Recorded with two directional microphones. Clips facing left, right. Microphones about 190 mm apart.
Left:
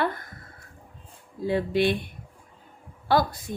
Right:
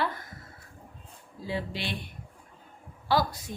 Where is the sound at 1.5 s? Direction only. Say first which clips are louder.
Left 10 dB; 55° left (ahead or behind).